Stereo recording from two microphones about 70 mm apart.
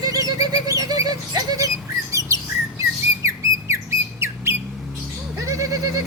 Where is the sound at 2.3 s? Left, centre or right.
Right.